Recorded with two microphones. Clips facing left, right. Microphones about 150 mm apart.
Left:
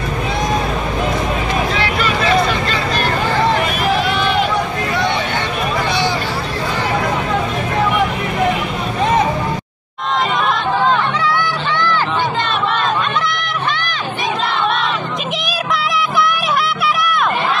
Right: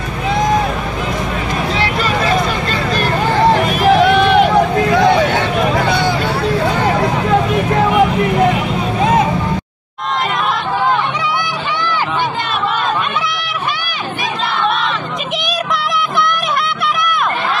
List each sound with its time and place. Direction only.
1.8 s vehicle: 40° right (ahead or behind)
4.0 s run: 60° right (ahead or behind)